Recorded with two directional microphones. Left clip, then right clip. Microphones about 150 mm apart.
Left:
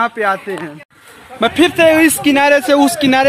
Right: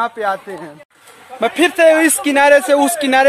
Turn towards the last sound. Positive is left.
turn(degrees=0)  # may be behind; listen again after turning